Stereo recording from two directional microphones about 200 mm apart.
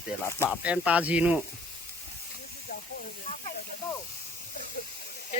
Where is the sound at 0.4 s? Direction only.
5° right (ahead or behind).